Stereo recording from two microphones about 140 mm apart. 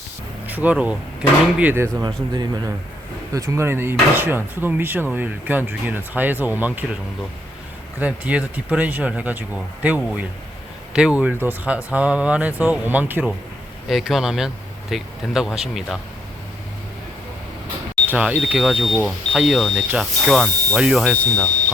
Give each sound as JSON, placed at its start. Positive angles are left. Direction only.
{"t": 0.4, "sound": "speech", "side_deg": -10}
{"t": 7.9, "sound": "speech", "side_deg": -10}
{"t": 13.8, "sound": "speech", "side_deg": 0}
{"t": 18.1, "sound": "speech", "side_deg": -10}